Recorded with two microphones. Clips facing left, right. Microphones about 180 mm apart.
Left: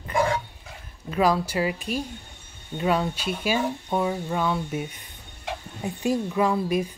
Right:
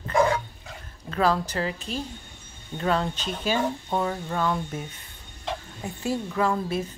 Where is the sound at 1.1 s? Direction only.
10° left (ahead or behind).